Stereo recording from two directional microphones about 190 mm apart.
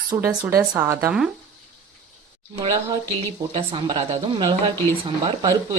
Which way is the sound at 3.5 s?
25° right (ahead or behind).